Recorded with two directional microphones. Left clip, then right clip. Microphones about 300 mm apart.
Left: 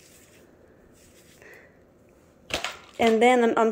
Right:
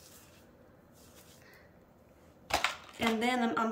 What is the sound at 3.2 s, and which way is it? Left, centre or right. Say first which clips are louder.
Speech: left 13 dB; centre.